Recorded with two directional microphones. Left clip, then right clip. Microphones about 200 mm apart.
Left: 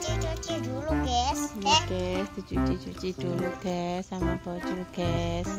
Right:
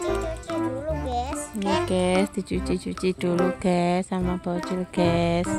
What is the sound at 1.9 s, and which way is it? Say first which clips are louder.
Speech: right 8 dB; 45° right (ahead or behind).